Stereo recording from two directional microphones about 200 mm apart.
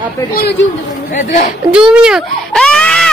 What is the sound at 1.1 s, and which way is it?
Speech, 40° left (ahead or behind).